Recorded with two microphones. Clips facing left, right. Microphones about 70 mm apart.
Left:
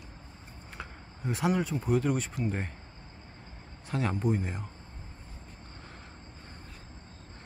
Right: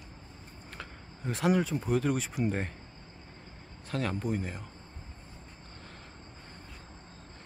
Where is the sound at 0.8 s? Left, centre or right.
Centre.